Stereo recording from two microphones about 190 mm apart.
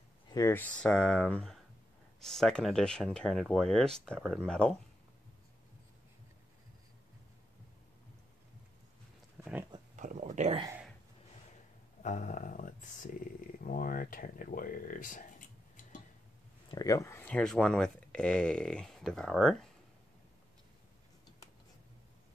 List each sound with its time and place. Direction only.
0.3 s speech: 15° left (ahead or behind)
9.4 s pig: 5° right (ahead or behind)
9.9 s speech: 40° right (ahead or behind)
12.0 s speech: 40° left (ahead or behind)
16.7 s speech: 15° left (ahead or behind); by 19.7 s centre (ahead or behind)